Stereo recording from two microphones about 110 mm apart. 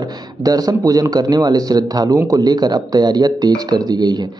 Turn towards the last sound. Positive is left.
turn(degrees=-40)  # may be behind; listen again after turning